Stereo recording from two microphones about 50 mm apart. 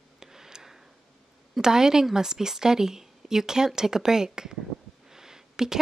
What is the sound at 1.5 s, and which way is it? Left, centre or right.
Speech, centre.